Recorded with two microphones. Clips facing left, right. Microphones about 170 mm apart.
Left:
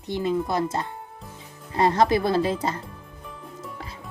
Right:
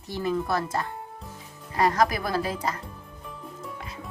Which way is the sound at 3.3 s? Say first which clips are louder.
Even; centre (ahead or behind).